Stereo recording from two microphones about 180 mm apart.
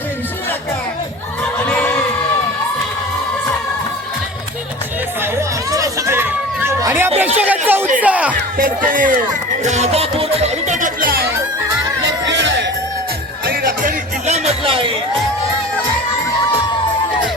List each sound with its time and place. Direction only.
5.7 s chatter: 20° right (ahead or behind)
7.2 s a sound: 10° right (ahead or behind)
8.0 s music: 10° right (ahead or behind)
8.4 s speech: 50° right (ahead or behind)
9.6 s music: 40° right (ahead or behind); by 11.3 s 55° right (ahead or behind)
12.3 s music: 85° right
13.5 s music: 55° right (ahead or behind)
14.3 s music: 35° right (ahead or behind)